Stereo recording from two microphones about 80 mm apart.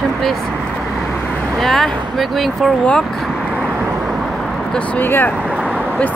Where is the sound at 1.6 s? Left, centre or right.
Centre.